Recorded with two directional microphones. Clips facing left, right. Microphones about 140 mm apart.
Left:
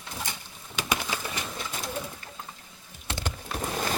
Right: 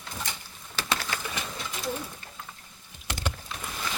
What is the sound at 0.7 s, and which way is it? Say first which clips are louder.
Pigeon: left 1 dB; 15° left (ahead or behind).